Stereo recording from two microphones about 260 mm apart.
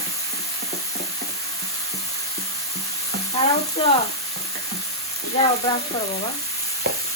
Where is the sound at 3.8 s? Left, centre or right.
Left.